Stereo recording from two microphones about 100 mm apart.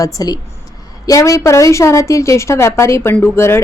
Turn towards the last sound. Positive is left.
turn(degrees=25)  # may be behind; listen again after turning